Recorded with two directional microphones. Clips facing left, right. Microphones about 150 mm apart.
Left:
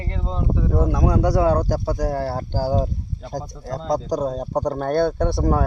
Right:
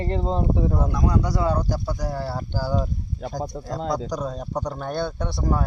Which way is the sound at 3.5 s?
60° right (ahead or behind).